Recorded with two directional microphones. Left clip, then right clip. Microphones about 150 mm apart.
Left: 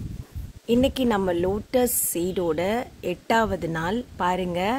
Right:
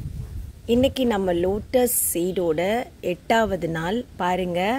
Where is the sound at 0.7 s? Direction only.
10° right (ahead or behind).